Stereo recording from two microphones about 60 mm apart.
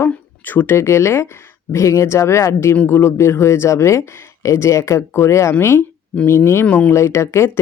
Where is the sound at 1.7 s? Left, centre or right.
Left.